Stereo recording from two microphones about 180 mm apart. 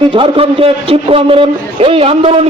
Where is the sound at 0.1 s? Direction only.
30° right (ahead or behind).